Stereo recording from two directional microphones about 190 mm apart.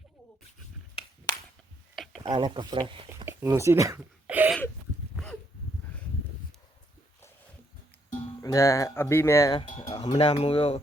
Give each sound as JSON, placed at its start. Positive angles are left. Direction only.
{"t": 2.2, "sound": "speech", "side_deg": -25}
{"t": 3.2, "sound": "a sound", "side_deg": -15}
{"t": 8.4, "sound": "speech", "side_deg": 15}
{"t": 9.9, "sound": "speech", "side_deg": 20}
{"t": 10.2, "sound": "speech", "side_deg": 30}